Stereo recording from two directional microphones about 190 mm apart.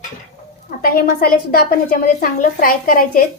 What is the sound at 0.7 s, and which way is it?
A woman's voice, 50° left (ahead or behind).